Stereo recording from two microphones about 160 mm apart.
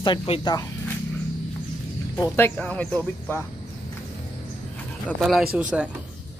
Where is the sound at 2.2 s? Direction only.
15° left (ahead or behind).